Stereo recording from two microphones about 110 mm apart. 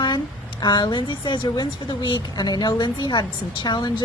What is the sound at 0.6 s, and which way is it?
A woman's voice, 40° left (ahead or behind).